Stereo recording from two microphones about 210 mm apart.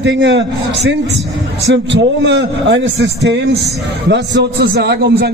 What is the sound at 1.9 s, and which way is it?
A man's voice, 55° right (ahead or behind).